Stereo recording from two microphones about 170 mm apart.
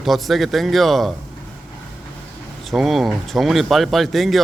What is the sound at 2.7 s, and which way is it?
Speech, centre (ahead or behind).